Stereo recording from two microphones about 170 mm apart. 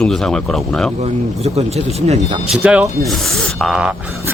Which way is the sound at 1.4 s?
40° right (ahead or behind).